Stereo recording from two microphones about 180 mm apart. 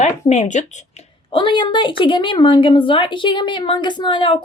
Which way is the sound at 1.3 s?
25° left (ahead or behind).